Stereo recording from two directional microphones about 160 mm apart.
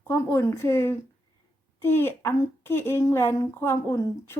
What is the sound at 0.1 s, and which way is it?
A woman's voice, 15° left (ahead or behind).